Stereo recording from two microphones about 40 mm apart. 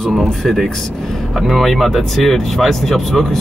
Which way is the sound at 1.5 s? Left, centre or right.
Centre.